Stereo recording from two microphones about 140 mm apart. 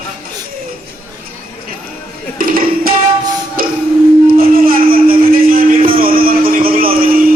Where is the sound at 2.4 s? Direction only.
90° right.